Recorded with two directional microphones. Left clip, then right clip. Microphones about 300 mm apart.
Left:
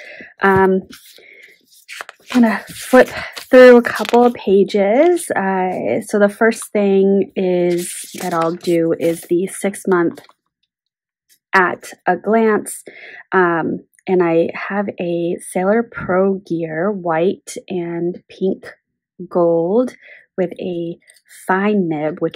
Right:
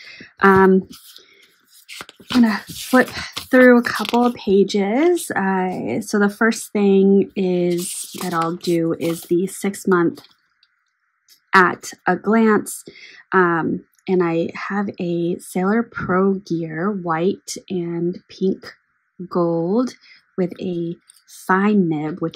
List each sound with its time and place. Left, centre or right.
0.0 s speech: centre
11.5 s speech: centre